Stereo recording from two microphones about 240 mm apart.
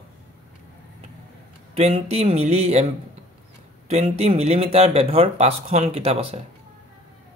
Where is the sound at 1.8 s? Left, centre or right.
Right.